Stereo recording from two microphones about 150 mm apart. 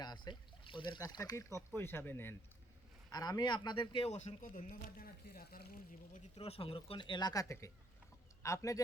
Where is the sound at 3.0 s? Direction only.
25° left (ahead or behind); by 6.2 s 70° left (ahead or behind).